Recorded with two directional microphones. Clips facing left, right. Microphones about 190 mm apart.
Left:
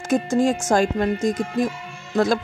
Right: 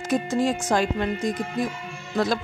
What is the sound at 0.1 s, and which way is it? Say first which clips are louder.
Music: left 4 dB; 45° left (ahead or behind).